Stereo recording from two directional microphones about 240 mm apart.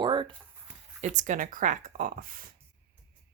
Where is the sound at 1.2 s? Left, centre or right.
Right.